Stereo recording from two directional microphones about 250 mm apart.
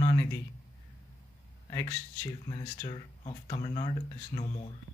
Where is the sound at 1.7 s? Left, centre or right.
Centre.